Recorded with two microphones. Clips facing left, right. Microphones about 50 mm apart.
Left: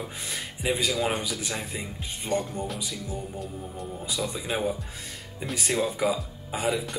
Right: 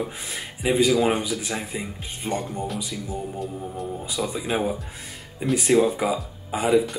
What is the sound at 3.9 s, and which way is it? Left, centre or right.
Speech, centre.